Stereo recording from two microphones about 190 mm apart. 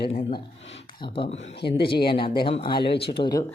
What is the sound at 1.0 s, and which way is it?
Speech, 25° left (ahead or behind).